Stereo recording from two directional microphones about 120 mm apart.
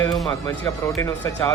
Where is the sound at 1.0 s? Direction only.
25° left (ahead or behind).